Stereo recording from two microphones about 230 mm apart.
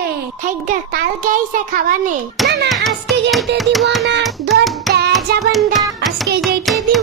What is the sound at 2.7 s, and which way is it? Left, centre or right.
Music, centre.